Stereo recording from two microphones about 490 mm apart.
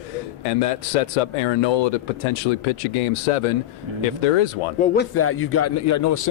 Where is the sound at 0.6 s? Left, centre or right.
Left.